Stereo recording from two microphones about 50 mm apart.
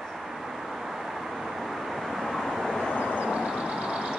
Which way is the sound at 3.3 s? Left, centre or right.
Centre.